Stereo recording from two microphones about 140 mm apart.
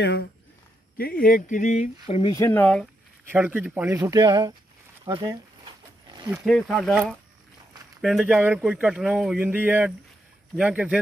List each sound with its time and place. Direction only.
0.9 s speech: 90° left; by 2.3 s 45° left (ahead or behind)
2.3 s speech: 20° left (ahead or behind)
2.6 s speech: 5° left (ahead or behind)
3.3 s speech: 10° right (ahead or behind)
3.9 s speech: 25° right (ahead or behind)
5.0 s a sound: 30° right (ahead or behind)
6.4 s speech: 5° left (ahead or behind)
8.0 s speech: 5° right (ahead or behind)